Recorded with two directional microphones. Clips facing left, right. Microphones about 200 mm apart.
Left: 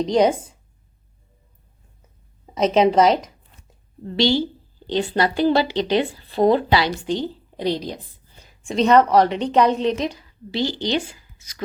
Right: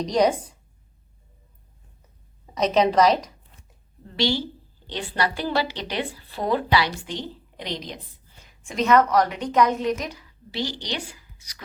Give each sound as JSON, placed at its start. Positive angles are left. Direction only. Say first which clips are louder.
{"t": 0.0, "sound": "a woman's voice", "louder": "left 3 dB", "side_deg": 25}
{"t": 2.6, "sound": "a woman's voice", "louder": "left 3 dB", "side_deg": 25}